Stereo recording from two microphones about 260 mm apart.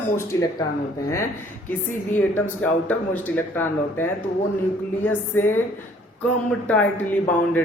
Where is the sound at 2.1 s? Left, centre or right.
Centre.